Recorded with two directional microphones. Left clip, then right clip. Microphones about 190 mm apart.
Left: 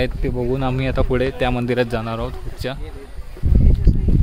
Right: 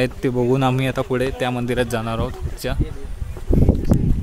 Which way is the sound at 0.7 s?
5° left (ahead or behind).